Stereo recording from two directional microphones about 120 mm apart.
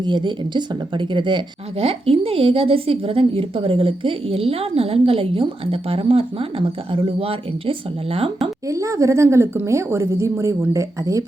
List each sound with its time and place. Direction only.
0.0 s speech: 40° right (ahead or behind)
1.8 s a woman's voice: 50° right (ahead or behind)
8.7 s speech: 25° right (ahead or behind)